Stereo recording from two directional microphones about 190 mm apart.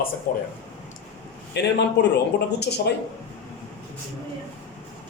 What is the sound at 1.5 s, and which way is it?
Speech, 65° left (ahead or behind).